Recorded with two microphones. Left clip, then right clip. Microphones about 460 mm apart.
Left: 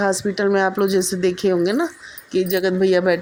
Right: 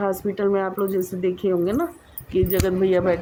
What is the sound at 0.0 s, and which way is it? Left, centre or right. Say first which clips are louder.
Speech: left 3 dB; right.